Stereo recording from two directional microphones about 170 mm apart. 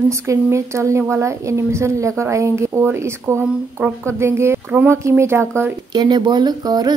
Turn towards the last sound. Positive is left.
turn(degrees=-25)  # may be behind; listen again after turning